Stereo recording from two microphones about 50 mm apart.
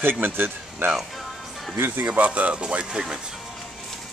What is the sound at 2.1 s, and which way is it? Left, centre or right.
Speech, right.